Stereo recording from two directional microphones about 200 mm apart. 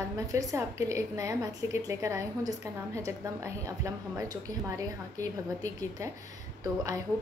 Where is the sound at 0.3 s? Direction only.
15° right (ahead or behind).